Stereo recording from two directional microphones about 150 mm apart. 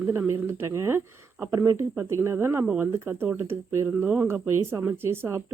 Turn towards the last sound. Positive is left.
turn(degrees=-15)  # may be behind; listen again after turning